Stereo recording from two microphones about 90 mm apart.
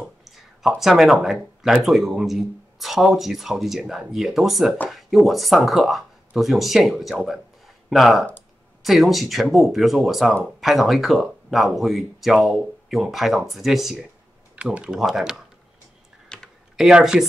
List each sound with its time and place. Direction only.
0.2 s speech: centre (ahead or behind)
14.5 s speech: 15° right (ahead or behind)
16.3 s computer keyboard: 10° left (ahead or behind)
16.7 s speech: 5° right (ahead or behind)